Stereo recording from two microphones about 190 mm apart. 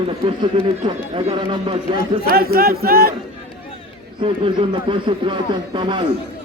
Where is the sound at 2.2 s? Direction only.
50° right (ahead or behind).